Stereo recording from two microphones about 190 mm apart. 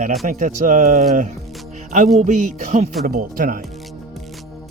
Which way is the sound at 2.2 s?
40° right (ahead or behind).